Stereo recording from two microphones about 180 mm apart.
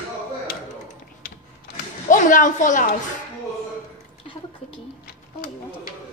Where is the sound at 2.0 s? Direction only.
45° left (ahead or behind).